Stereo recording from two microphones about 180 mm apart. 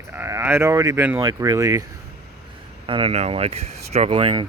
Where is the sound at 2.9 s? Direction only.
30° right (ahead or behind).